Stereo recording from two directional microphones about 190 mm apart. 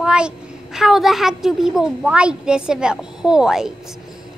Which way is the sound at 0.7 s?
Centre (ahead or behind).